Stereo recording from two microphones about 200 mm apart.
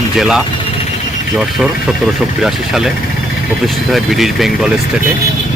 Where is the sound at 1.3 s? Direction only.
Centre (ahead or behind).